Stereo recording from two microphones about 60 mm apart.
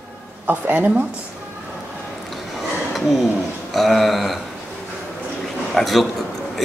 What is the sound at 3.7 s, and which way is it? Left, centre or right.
Speech, centre.